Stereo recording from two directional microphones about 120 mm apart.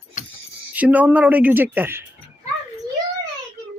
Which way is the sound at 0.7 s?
15° right (ahead or behind).